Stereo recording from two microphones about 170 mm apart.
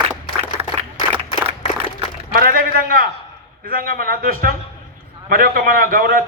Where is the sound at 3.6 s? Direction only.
55° right (ahead or behind).